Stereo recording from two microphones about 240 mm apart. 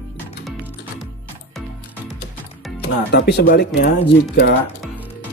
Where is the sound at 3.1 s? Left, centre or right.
Left.